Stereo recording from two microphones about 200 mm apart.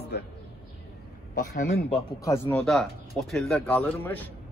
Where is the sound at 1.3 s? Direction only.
45° left (ahead or behind).